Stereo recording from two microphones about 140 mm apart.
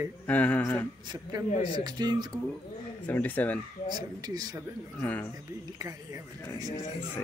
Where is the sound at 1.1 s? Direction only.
25° right (ahead or behind).